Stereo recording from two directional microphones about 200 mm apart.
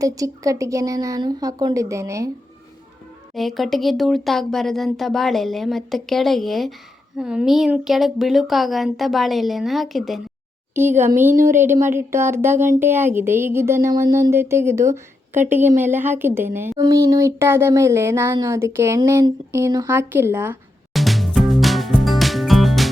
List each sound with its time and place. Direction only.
0.0 s a woman's voice: 15° right (ahead or behind)
3.3 s speech: centre (ahead or behind)
11.4 s a woman's voice: 10° right (ahead or behind)
20.9 s music: centre (ahead or behind)